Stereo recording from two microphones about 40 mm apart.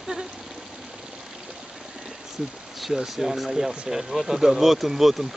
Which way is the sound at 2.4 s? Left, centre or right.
Centre.